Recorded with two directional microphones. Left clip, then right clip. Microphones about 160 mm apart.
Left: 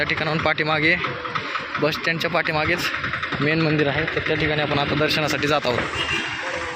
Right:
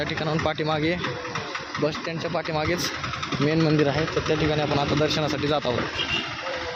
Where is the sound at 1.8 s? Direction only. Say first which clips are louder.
Left 5 dB; centre (ahead or behind).